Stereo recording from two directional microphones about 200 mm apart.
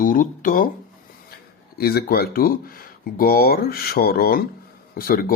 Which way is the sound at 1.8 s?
50° left (ahead or behind).